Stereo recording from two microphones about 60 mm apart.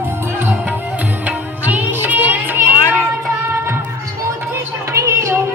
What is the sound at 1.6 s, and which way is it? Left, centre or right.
Music, right.